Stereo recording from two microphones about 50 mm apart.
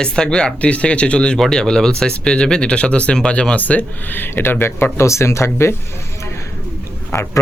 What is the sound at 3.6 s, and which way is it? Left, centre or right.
Speech, left.